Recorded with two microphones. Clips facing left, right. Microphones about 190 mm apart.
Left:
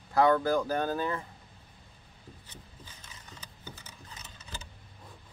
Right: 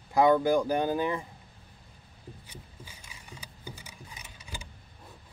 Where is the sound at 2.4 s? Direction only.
10° right (ahead or behind).